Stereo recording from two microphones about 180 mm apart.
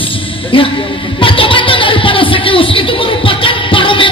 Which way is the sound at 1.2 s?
30° left (ahead or behind).